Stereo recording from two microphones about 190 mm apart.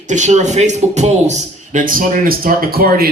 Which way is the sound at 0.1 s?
40° right (ahead or behind).